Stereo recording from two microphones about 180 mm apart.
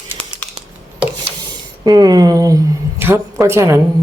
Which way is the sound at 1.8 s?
20° right (ahead or behind).